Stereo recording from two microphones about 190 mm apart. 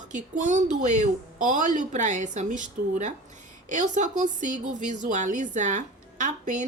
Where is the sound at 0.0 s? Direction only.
40° right (ahead or behind).